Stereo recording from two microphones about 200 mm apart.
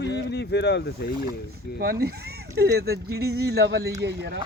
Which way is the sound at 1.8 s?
50° right (ahead or behind).